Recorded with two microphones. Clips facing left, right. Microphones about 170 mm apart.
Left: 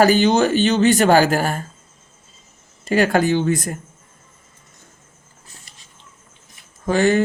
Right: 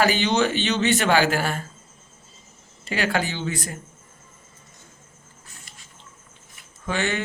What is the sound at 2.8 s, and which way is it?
Speech, 45° left (ahead or behind).